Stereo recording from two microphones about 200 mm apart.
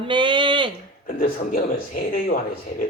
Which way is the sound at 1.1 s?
45° left (ahead or behind).